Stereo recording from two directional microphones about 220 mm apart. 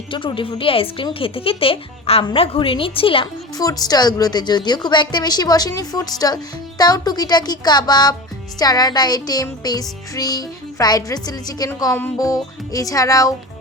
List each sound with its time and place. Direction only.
0.1 s a woman's voice: 25° left (ahead or behind)
8.5 s music: 15° left (ahead or behind)